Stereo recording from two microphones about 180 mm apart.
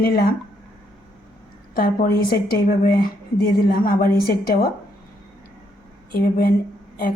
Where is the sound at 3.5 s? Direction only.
55° left (ahead or behind).